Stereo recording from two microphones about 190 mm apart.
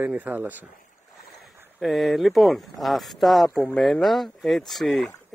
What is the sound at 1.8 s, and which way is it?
Speech, centre (ahead or behind).